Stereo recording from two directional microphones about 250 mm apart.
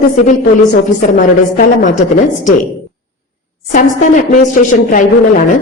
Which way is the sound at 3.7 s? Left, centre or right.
Left.